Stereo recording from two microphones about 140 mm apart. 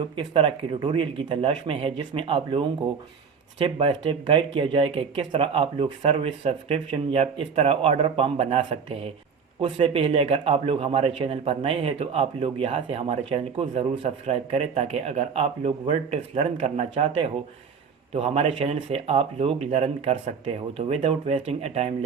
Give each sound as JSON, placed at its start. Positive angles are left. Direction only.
{"t": 0.0, "sound": "a man's voice", "side_deg": -35}